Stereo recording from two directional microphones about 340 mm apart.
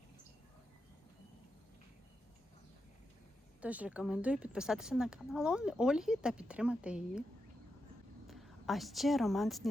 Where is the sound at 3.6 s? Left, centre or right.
Centre.